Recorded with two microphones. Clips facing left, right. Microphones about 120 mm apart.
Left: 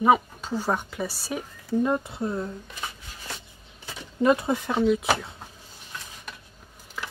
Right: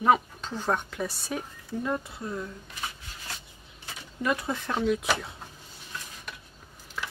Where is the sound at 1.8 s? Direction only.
25° left (ahead or behind).